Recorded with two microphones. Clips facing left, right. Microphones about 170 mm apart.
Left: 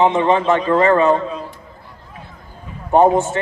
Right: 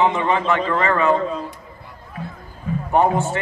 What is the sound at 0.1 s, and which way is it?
A man's voice, 25° left (ahead or behind).